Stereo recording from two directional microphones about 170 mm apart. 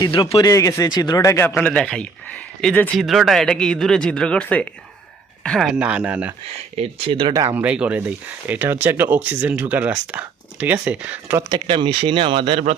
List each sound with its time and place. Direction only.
0.0 s speech: 30° left (ahead or behind); by 6.3 s 10° right (ahead or behind)
6.7 s speech: 35° right (ahead or behind)
7.4 s speech: 10° right (ahead or behind)
11.4 s speech: 25° right (ahead or behind)